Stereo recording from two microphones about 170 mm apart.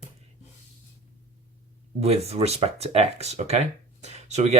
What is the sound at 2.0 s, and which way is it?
Speech, 40° right (ahead or behind).